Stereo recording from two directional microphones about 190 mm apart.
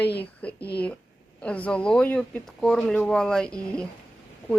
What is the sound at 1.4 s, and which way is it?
Speech, 5° left (ahead or behind).